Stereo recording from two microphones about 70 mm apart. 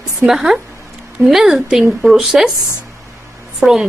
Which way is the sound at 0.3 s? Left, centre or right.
Centre.